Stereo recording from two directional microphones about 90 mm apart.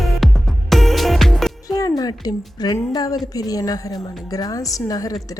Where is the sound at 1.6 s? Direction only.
45° left (ahead or behind).